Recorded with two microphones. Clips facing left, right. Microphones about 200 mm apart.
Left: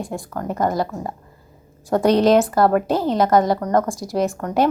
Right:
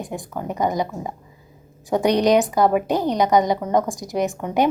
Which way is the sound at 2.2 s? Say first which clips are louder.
Left 2 dB; centre (ahead or behind).